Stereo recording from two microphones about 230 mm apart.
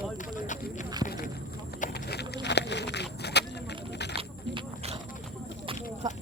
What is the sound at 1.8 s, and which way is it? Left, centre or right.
Clip-clop, left.